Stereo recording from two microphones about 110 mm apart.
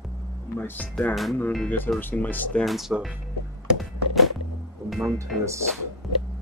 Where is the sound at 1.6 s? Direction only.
15° left (ahead or behind).